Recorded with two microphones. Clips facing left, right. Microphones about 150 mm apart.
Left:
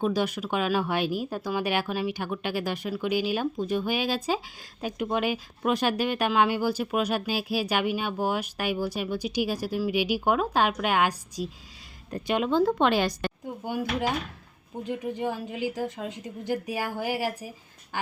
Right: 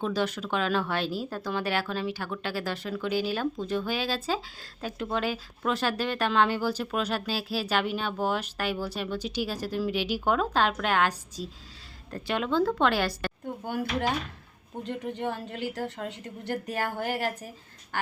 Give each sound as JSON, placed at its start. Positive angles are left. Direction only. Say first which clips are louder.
{"t": 0.0, "sound": "speech", "louder": "left 2 dB", "side_deg": 10}
{"t": 17.9, "sound": "duck", "louder": "even", "side_deg": 15}